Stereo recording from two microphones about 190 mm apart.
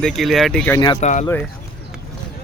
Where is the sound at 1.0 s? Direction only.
40° left (ahead or behind).